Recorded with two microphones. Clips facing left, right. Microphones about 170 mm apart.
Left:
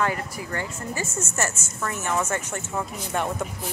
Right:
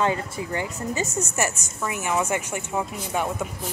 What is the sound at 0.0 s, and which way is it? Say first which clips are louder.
Speech: right 2 dB; 20° right (ahead or behind).